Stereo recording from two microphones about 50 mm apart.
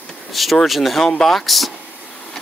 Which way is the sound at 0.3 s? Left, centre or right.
Centre.